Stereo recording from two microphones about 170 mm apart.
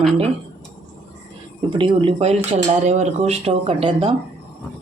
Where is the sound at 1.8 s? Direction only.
30° right (ahead or behind).